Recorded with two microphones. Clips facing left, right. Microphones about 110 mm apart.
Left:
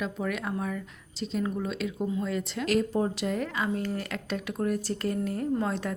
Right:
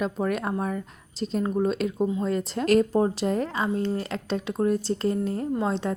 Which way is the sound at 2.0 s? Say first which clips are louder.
Right 4 dB; 25° right (ahead or behind).